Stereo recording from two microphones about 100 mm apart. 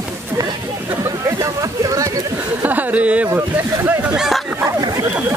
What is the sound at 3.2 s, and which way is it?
Speech, 25° right (ahead or behind).